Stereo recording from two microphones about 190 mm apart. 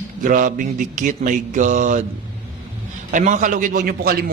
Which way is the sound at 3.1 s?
40° right (ahead or behind).